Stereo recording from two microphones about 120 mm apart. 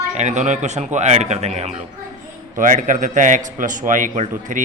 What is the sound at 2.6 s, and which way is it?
A man's voice, 90° right.